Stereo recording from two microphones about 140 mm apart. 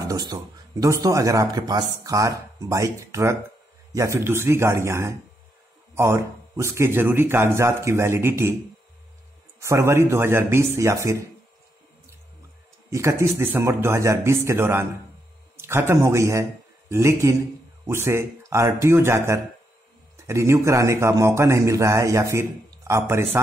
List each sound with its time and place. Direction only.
0.0 s speech: 25° right (ahead or behind)
9.6 s speech: 20° right (ahead or behind)
12.9 s a man's voice: 20° right (ahead or behind)